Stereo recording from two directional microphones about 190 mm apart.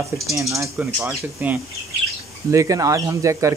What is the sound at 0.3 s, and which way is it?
Speech, 15° right (ahead or behind).